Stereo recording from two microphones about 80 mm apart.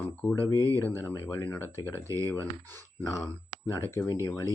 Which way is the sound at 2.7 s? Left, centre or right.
Left.